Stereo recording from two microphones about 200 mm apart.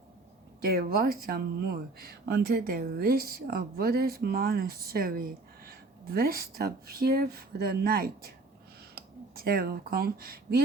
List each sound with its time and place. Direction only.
0.6 s speech: 50° right (ahead or behind)